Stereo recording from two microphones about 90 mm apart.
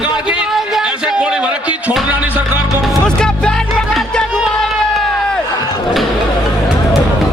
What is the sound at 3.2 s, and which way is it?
Music, 10° left (ahead or behind).